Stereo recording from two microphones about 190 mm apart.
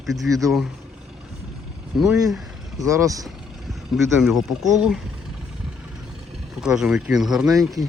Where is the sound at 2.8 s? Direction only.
15° right (ahead or behind).